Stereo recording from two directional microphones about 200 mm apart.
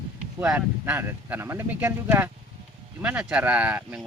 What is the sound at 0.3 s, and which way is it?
Speech, 10° right (ahead or behind).